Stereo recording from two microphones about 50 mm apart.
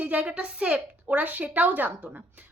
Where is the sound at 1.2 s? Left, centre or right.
Right.